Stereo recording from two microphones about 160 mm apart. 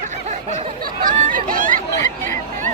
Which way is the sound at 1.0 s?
60° right (ahead or behind).